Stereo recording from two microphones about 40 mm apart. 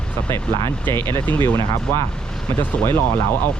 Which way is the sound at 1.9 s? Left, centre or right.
Left.